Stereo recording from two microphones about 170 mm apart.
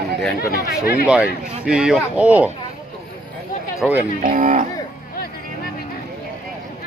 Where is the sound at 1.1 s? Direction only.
5° right (ahead or behind).